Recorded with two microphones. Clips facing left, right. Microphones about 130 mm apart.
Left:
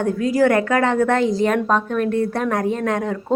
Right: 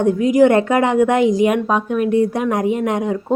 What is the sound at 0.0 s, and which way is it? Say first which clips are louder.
A woman's voice: right 5 dB; 20° right (ahead or behind).